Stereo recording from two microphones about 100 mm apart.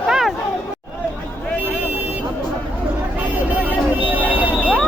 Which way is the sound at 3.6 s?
15° right (ahead or behind).